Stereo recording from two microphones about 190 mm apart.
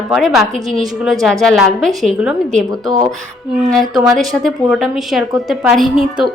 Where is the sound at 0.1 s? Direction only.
Centre (ahead or behind).